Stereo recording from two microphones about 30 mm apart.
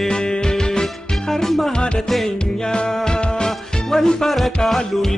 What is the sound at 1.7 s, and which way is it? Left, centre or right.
Music, left.